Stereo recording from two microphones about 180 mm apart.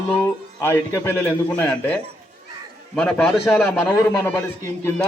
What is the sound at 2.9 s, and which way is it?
Speech, 5° left (ahead or behind).